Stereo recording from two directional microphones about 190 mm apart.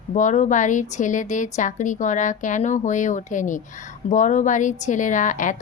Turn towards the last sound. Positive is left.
turn(degrees=40)  # may be behind; listen again after turning